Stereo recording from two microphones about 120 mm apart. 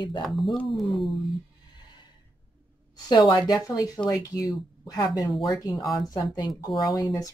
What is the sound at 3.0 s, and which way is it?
Speech, 35° left (ahead or behind).